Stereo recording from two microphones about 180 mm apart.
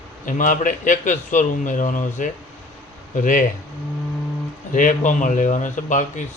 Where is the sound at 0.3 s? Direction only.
45° left (ahead or behind).